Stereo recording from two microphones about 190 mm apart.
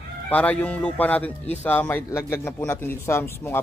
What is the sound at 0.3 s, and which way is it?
Speech, 5° left (ahead or behind).